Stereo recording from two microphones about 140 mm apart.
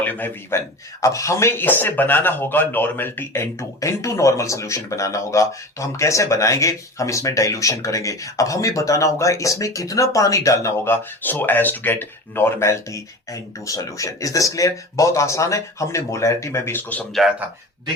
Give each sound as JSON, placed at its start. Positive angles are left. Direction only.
{"t": 0.0, "sound": "a man's voice", "side_deg": 10}
{"t": 1.0, "sound": "speech", "side_deg": 20}